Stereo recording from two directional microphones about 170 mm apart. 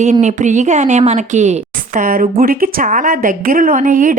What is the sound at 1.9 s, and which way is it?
A woman's voice, 55° right (ahead or behind).